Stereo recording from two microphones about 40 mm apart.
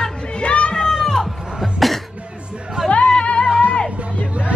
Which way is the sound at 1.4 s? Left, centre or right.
Centre.